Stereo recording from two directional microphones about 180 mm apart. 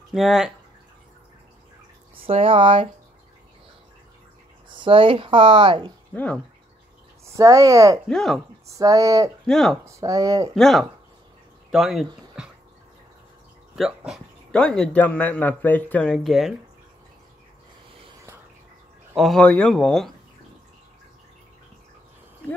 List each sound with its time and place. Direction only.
0.1 s speech: centre (ahead or behind)
2.2 s speech: 30° right (ahead or behind)
4.7 s speech: 30° right (ahead or behind)
6.1 s speech: 5° left (ahead or behind)
7.3 s speech: 20° right (ahead or behind)
8.1 s speech: centre (ahead or behind)
8.7 s speech: 20° right (ahead or behind)
9.5 s speech: centre (ahead or behind)
9.8 s speech: 15° right (ahead or behind)
10.5 s speech: centre (ahead or behind)
13.7 s speech: 5° right (ahead or behind)
19.1 s speech: centre (ahead or behind)